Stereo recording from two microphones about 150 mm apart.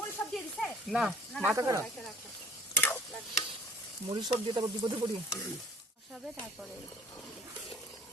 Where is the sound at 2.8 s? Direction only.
10° left (ahead or behind).